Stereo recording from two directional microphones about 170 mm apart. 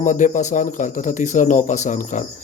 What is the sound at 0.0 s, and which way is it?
Speech, 45° left (ahead or behind).